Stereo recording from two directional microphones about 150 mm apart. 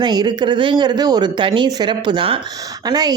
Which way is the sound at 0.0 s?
30° right (ahead or behind).